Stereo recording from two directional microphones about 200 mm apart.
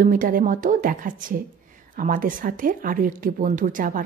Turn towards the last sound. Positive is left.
turn(degrees=-40)  # may be behind; listen again after turning